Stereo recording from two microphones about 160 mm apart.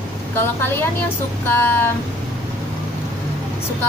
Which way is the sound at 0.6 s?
15° left (ahead or behind).